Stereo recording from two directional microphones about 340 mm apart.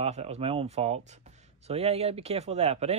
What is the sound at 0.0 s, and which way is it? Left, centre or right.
Speech, centre.